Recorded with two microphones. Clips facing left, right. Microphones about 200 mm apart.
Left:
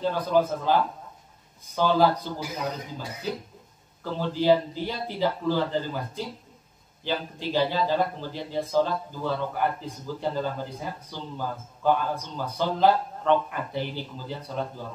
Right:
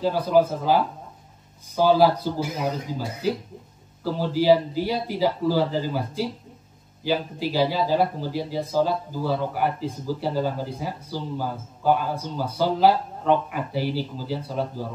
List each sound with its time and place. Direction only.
0.0 s a man's voice: 10° right (ahead or behind)
1.8 s a man's voice: 10° right (ahead or behind)
4.0 s a man's voice: 10° right (ahead or behind)